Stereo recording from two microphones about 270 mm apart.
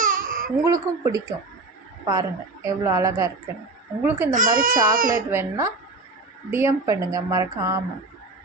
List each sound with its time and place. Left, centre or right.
0.0 s baby cry: right
0.5 s a woman's voice: centre
4.3 s speech: right
5.3 s a woman's voice: centre